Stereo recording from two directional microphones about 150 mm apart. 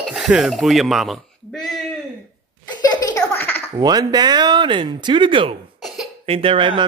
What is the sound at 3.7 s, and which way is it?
Speech, 25° right (ahead or behind).